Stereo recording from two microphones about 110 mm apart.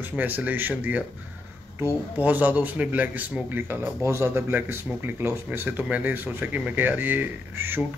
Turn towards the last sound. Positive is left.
turn(degrees=-20)  # may be behind; listen again after turning